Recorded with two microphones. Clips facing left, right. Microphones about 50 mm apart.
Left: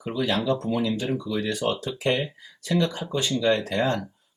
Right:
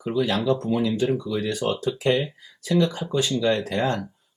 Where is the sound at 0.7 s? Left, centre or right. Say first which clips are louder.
Right 3 dB; centre.